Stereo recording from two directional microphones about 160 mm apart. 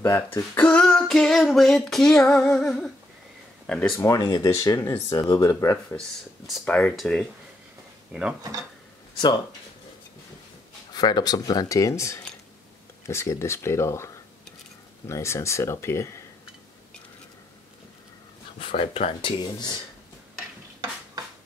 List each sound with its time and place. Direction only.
0.0 s a sound: 15° left (ahead or behind)
4.0 s speech: 25° left (ahead or behind)
5.9 s a sound: centre (ahead or behind)
8.1 s speech: 5° right (ahead or behind)
10.9 s speech: 25° left (ahead or behind)
18.6 s speech: 35° left (ahead or behind)